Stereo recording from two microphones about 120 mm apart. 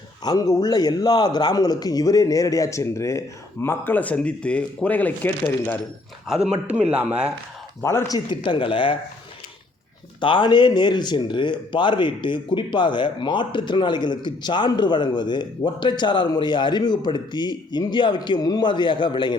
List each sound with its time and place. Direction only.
0.3 s a man's voice: 30° left (ahead or behind); by 5.8 s 15° left (ahead or behind)
6.5 s speech: 10° right (ahead or behind)
7.8 s a man's voice: 20° left (ahead or behind)
8.4 s speech: 45° left (ahead or behind)
10.2 s speech: 40° left (ahead or behind)